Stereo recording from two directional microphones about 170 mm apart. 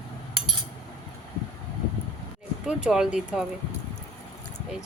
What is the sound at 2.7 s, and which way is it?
Speech, 5° right (ahead or behind).